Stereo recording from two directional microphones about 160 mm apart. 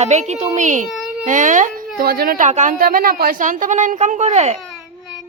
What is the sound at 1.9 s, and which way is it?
A woman's voice, 70° right (ahead or behind).